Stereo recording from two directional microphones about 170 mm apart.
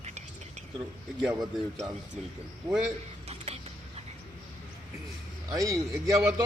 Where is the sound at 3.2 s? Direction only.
40° right (ahead or behind).